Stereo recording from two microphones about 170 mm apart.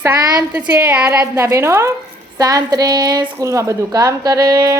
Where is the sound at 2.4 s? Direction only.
20° right (ahead or behind).